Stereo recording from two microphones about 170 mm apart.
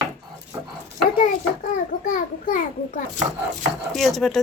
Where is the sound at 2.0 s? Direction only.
50° left (ahead or behind).